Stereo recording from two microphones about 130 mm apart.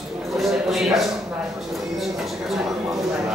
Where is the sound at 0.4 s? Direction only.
Centre (ahead or behind).